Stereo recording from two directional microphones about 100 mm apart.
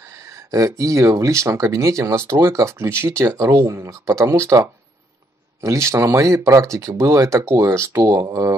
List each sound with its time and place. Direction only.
0.5 s speech: 35° right (ahead or behind)